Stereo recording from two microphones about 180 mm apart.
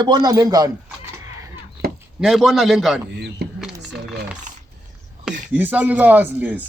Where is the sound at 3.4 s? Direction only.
65° right (ahead or behind).